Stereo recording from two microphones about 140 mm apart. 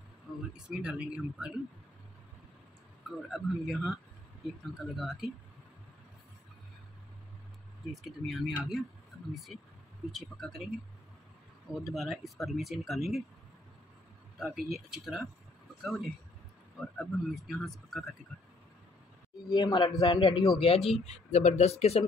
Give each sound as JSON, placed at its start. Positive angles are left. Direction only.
{"t": 0.6, "sound": "speech", "side_deg": -5}
{"t": 3.3, "sound": "speech", "side_deg": 0}
{"t": 7.9, "sound": "speech", "side_deg": 0}
{"t": 10.1, "sound": "speech", "side_deg": 0}
{"t": 11.7, "sound": "speech", "side_deg": -5}
{"t": 14.4, "sound": "speech", "side_deg": -5}
{"t": 19.5, "sound": "a man's voice", "side_deg": 30}